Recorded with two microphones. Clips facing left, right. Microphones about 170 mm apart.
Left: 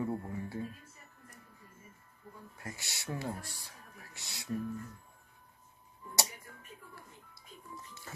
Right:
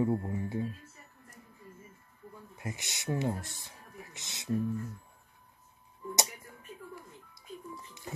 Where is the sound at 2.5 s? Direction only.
20° right (ahead or behind).